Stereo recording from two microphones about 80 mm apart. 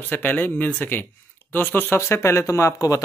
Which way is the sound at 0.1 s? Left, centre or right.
Left.